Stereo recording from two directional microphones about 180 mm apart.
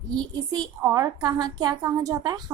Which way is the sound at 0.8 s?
20° right (ahead or behind).